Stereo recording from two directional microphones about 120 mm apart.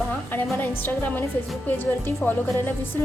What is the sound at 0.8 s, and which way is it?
A woman's voice, 15° left (ahead or behind).